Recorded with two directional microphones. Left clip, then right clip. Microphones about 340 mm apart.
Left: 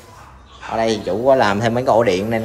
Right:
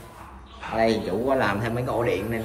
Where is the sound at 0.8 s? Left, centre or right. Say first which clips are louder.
Left 4 dB; centre.